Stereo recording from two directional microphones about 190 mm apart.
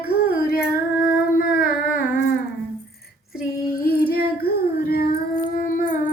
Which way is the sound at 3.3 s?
50° left (ahead or behind).